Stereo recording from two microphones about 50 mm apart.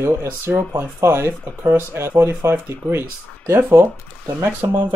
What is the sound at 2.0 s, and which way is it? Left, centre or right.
Speech, right.